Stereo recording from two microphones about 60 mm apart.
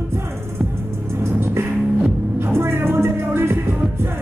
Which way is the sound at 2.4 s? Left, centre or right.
Right.